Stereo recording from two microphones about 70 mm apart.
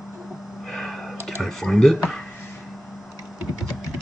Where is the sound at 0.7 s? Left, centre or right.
Centre.